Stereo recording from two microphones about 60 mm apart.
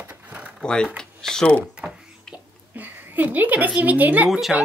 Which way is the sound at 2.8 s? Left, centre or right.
Right.